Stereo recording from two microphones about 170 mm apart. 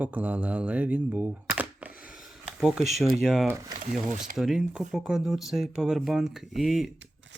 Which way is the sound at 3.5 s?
20° right (ahead or behind).